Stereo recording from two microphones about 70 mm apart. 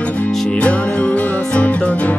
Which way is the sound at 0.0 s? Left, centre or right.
Left.